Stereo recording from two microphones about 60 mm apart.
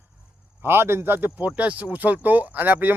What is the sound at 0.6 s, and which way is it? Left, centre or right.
Speech, right.